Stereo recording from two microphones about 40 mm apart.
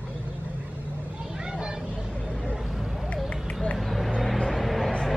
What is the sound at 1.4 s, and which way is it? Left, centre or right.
Vehicle, centre.